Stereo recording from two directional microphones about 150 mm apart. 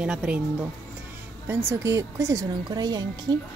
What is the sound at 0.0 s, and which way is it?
A woman's voice, 5° right (ahead or behind).